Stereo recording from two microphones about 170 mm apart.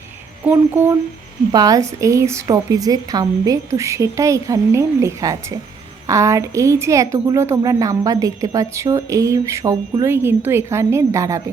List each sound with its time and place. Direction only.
0.4 s a woman's voice: 10° right (ahead or behind)
1.5 s a woman's voice: 20° right (ahead or behind)